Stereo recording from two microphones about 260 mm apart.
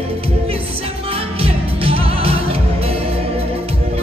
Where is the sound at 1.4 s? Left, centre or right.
Right.